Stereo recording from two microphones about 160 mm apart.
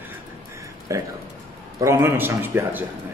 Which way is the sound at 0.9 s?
20° right (ahead or behind).